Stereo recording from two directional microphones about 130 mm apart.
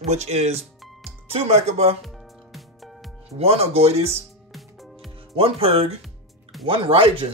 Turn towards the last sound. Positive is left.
turn(degrees=-45)  # may be behind; listen again after turning